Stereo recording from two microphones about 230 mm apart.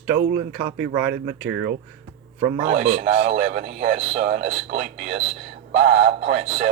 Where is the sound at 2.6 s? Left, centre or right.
Right.